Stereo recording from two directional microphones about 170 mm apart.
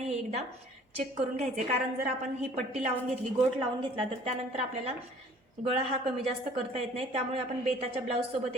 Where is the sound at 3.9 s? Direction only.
35° right (ahead or behind).